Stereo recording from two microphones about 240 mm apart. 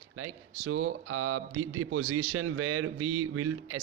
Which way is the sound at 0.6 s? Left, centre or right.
Right.